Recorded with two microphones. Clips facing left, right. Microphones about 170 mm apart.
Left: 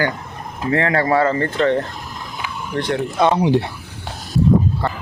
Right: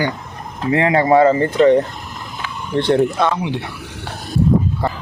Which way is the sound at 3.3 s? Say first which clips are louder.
Left 6 dB; 35° left (ahead or behind).